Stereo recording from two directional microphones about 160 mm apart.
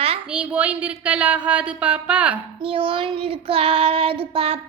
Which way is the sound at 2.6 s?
35° right (ahead or behind).